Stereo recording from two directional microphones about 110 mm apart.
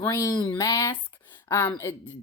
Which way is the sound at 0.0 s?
25° left (ahead or behind).